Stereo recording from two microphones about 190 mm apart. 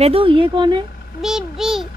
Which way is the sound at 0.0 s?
30° right (ahead or behind).